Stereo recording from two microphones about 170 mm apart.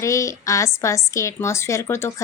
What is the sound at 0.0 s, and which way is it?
A woman's voice, 20° left (ahead or behind).